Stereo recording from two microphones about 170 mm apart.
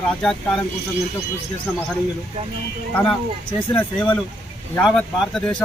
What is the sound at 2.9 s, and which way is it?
Speech, 5° left (ahead or behind).